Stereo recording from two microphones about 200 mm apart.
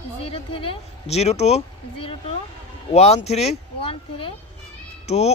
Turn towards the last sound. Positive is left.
turn(degrees=30)  # may be behind; listen again after turning